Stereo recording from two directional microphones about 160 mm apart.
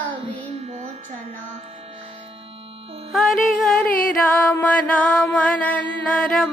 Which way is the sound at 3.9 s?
60° left (ahead or behind).